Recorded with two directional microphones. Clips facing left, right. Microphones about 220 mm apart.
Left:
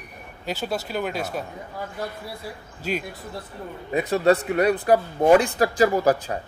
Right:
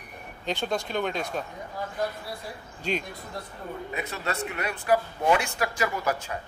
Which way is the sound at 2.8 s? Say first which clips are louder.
Left 2 dB; 5° left (ahead or behind).